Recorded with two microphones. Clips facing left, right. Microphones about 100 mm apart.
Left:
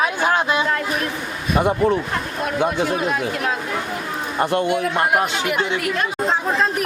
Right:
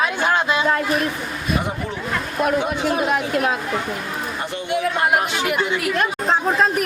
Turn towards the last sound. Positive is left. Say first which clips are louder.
# right 1 dB
turn(degrees=0)  # may be behind; listen again after turning